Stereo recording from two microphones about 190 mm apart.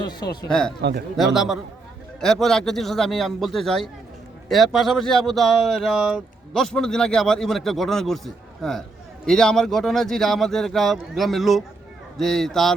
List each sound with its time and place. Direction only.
0.0 s speech: 20° left (ahead or behind)
0.8 s speech: 60° right (ahead or behind)
1.1 s speech: centre (ahead or behind)